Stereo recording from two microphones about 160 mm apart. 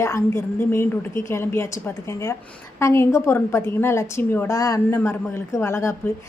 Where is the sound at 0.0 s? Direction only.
15° left (ahead or behind).